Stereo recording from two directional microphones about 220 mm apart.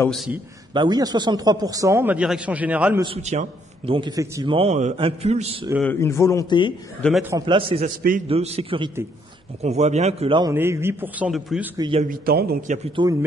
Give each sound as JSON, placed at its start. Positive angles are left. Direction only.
{"t": 0.0, "sound": "speech", "side_deg": 0}
{"t": 0.7, "sound": "speech", "side_deg": -20}
{"t": 3.0, "sound": "a man's voice", "side_deg": -25}
{"t": 5.8, "sound": "a man's voice", "side_deg": 10}
{"t": 7.0, "sound": "speech", "side_deg": 0}
{"t": 7.2, "sound": "a man's voice", "side_deg": -20}
{"t": 10.5, "sound": "speech", "side_deg": -10}
{"t": 11.8, "sound": "a man's voice", "side_deg": -25}
{"t": 12.1, "sound": "a man's voice", "side_deg": -45}
{"t": 12.7, "sound": "a man's voice", "side_deg": -25}